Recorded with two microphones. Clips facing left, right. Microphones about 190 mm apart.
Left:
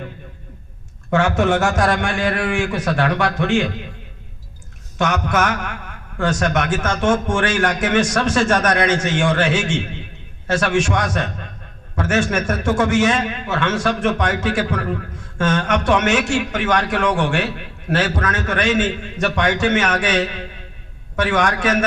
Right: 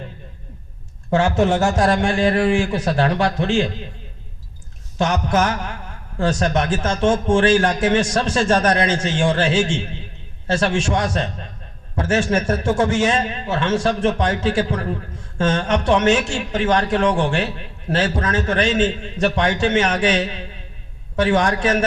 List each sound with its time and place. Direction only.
1.1 s a man's voice: 30° right (ahead or behind)
4.9 s a man's voice: 30° right (ahead or behind)